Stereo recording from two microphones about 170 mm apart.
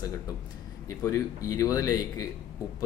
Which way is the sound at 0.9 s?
20° left (ahead or behind).